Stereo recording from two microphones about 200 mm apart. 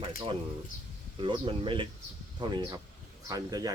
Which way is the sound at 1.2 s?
25° right (ahead or behind).